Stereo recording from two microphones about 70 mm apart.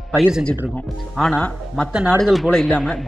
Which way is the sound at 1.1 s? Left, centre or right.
Centre.